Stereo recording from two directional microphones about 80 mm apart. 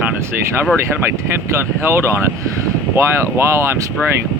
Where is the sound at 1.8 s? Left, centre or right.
Right.